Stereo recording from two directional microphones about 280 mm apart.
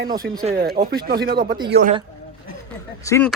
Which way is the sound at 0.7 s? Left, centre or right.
Right.